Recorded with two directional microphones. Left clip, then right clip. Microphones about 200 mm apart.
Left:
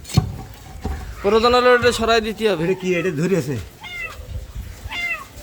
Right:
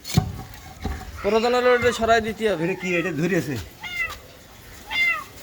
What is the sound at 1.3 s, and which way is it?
A man's voice, 30° left (ahead or behind).